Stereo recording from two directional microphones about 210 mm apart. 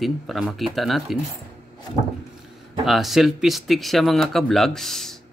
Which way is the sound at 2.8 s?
Centre (ahead or behind).